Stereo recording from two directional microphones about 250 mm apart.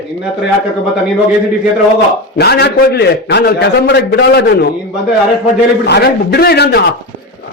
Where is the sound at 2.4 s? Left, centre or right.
Left.